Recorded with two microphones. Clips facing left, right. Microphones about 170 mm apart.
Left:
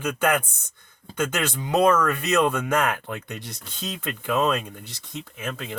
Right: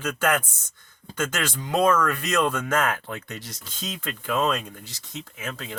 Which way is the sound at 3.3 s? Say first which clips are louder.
Left 2 dB; 60° left (ahead or behind).